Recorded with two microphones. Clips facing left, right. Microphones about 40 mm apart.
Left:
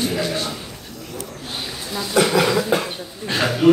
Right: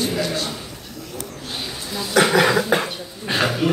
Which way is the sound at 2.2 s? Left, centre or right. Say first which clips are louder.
Right 2 dB; right.